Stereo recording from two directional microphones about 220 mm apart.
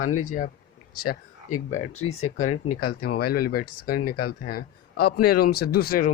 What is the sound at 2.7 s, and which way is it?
Speech, 45° left (ahead or behind).